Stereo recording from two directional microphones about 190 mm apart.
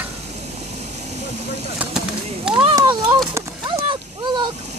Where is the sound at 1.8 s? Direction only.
5° right (ahead or behind).